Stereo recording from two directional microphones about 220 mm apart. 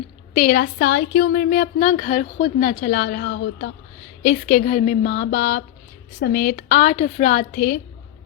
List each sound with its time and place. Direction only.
0.3 s speech: 40° left (ahead or behind)
4.2 s a woman's voice: 40° left (ahead or behind)